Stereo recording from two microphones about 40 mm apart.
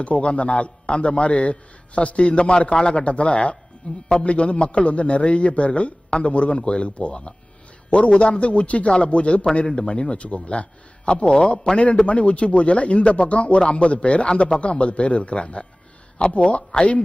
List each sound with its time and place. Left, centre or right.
0.0 s a man's voice: left